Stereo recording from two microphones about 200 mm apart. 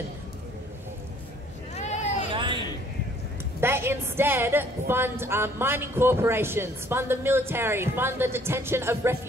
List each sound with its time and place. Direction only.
1.8 s vehicle: 35° left (ahead or behind)
2.3 s a sound: 25° right (ahead or behind)
3.6 s a woman's voice: 10° right (ahead or behind)